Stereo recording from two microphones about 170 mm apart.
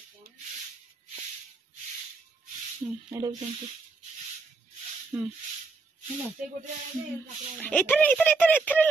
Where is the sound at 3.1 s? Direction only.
20° right (ahead or behind).